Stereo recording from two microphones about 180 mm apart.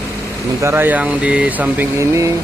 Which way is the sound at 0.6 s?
15° right (ahead or behind).